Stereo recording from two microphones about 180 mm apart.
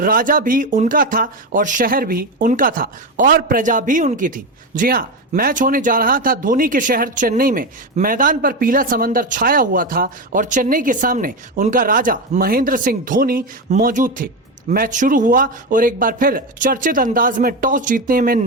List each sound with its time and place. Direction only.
0.0 s speech: 50° right (ahead or behind)